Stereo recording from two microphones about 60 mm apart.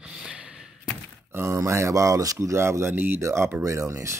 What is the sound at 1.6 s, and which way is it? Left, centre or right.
Speech, right.